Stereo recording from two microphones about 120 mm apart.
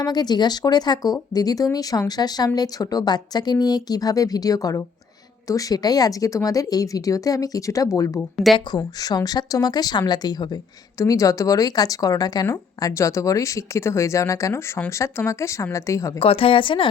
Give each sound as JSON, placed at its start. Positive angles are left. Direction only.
{"t": 0.0, "sound": "a woman's voice", "side_deg": 35}
{"t": 16.2, "sound": "a woman's voice", "side_deg": 50}